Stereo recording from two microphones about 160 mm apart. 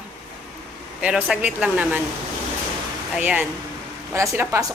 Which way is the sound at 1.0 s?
5° right (ahead or behind).